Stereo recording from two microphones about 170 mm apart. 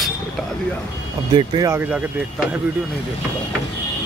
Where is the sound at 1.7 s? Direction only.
10° right (ahead or behind).